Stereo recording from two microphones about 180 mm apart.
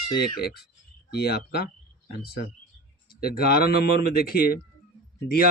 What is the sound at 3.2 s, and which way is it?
A man's voice, 55° left (ahead or behind).